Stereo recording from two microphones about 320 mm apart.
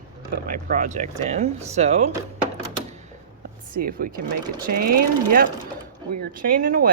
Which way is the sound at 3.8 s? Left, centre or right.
Right.